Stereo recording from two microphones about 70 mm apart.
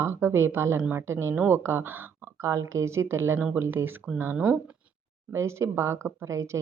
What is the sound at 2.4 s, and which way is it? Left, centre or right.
Speech, right.